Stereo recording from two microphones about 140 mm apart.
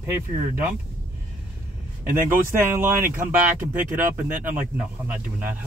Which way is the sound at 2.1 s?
15° right (ahead or behind).